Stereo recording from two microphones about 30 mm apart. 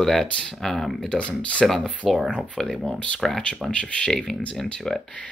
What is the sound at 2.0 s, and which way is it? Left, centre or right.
Speech, centre.